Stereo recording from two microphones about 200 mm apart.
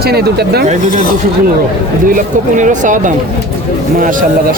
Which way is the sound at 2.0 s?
40° right (ahead or behind).